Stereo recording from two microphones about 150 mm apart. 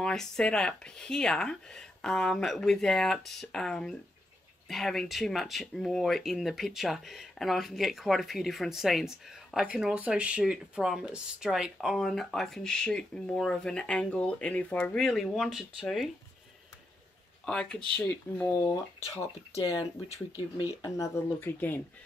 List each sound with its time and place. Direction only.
0.0 s speech: 5° left (ahead or behind)
17.5 s speech: 5° left (ahead or behind)
19.1 s speech: 20° left (ahead or behind)